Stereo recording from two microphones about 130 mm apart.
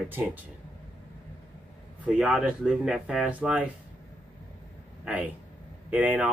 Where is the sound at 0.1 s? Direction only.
15° right (ahead or behind).